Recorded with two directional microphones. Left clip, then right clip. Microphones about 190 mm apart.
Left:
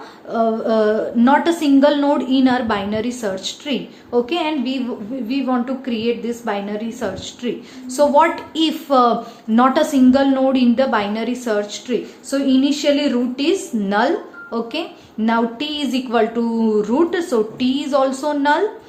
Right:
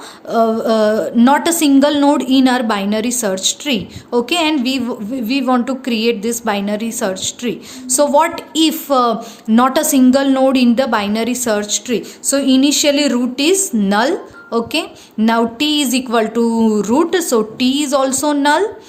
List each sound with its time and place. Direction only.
0.3 s a woman's voice: 40° right (ahead or behind)